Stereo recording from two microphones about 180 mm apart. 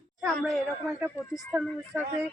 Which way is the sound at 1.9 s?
5° right (ahead or behind).